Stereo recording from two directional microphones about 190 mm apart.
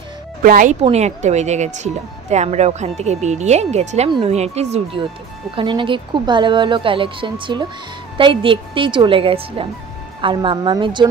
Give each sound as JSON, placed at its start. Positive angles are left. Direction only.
{"t": 0.4, "sound": "speech", "side_deg": -45}
{"t": 0.8, "sound": "speech", "side_deg": -35}